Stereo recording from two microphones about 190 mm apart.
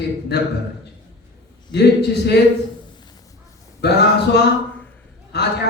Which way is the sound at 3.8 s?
60° left (ahead or behind).